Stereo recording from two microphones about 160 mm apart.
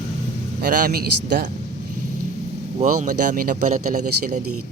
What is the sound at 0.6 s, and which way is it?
Speech, 65° right (ahead or behind).